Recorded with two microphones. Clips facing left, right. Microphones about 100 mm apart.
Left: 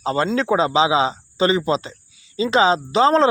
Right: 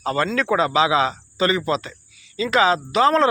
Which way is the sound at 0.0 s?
25° left (ahead or behind).